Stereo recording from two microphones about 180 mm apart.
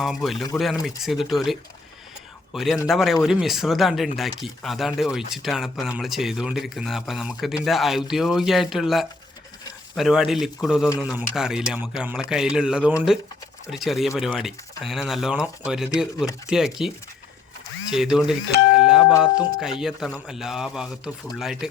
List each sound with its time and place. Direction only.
0.0 s a man's voice: centre (ahead or behind)
18.7 s doorbell: 5° right (ahead or behind)
19.2 s speech: 5° right (ahead or behind)